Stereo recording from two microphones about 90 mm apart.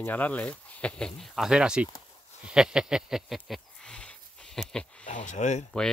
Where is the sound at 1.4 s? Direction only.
10° right (ahead or behind).